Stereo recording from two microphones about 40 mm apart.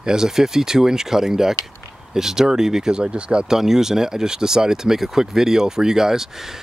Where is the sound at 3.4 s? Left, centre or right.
Centre.